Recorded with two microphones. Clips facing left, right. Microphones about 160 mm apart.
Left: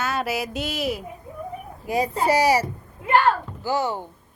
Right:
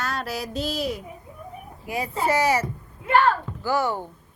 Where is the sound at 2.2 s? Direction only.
15° left (ahead or behind).